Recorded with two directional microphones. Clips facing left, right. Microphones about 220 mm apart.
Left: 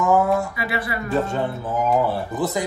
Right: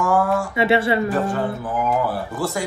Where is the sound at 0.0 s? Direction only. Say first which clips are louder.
Left 1 dB; 20° left (ahead or behind).